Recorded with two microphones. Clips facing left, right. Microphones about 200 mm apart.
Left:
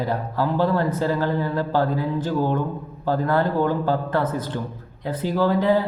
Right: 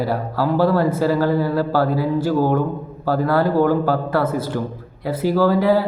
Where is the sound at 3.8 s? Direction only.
10° right (ahead or behind).